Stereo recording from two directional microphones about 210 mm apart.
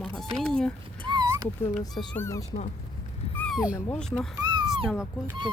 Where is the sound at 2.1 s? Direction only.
10° left (ahead or behind).